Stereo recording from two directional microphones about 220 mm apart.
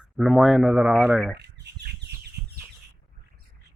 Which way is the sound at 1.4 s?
50° right (ahead or behind).